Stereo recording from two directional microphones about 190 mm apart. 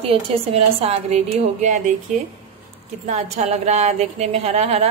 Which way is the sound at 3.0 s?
35° right (ahead or behind).